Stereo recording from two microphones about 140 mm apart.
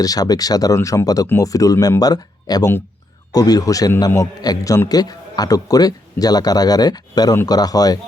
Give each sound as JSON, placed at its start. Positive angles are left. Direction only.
{"t": 0.0, "sound": "a man's voice", "side_deg": 25}